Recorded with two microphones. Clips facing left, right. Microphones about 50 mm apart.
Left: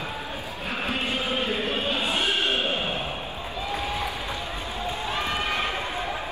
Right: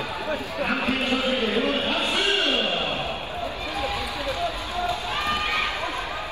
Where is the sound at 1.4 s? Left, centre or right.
Right.